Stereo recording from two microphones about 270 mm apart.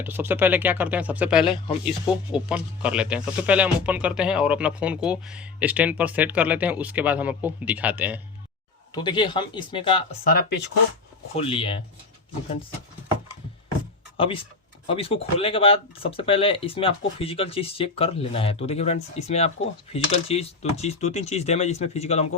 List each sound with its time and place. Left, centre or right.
0.0 s speech: centre
1.5 s speech: centre
1.8 s speech: centre
9.0 s speech: centre
10.3 s speech: left
11.3 s speech: centre
14.2 s speech: centre